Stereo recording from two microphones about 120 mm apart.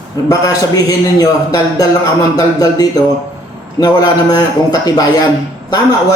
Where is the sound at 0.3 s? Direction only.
30° left (ahead or behind).